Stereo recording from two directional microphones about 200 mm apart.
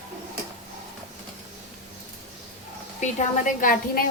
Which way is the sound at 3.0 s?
40° left (ahead or behind).